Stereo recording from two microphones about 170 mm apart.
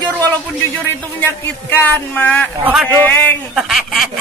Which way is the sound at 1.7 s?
10° left (ahead or behind).